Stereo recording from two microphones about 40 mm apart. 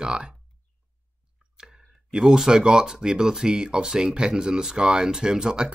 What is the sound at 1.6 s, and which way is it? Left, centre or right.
Clicking, centre.